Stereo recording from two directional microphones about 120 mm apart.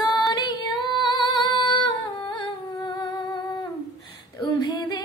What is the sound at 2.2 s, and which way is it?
Humming, 40° left (ahead or behind).